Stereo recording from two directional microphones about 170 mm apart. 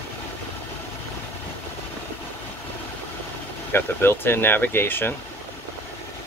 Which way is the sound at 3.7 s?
15° left (ahead or behind).